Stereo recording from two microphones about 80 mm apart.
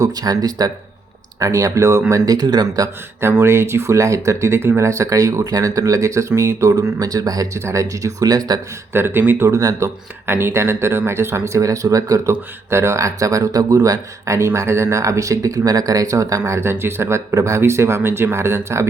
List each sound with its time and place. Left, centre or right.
0.0 s speech: right
3.2 s speech: right
8.9 s speech: right
9.5 s speech: right
10.2 s speech: right
12.3 s speech: right